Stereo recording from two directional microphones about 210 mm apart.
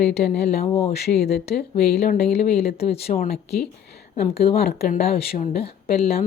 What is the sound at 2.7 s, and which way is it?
Speech, 30° left (ahead or behind).